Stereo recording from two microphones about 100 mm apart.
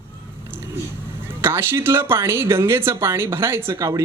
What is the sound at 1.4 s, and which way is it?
Speech, 25° right (ahead or behind).